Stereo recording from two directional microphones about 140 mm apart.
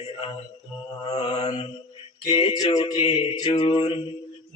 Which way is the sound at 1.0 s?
40° left (ahead or behind).